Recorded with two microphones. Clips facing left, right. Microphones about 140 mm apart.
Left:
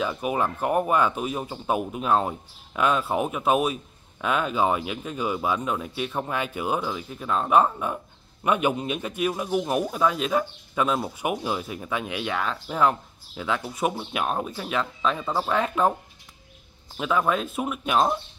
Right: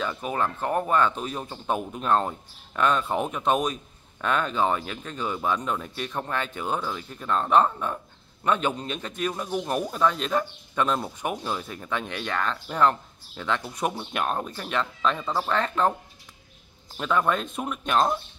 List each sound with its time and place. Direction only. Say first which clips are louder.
0.0 s speech: left 2 dB; 10° left (ahead or behind)
16.9 s speech: left 1 dB; 5° left (ahead or behind)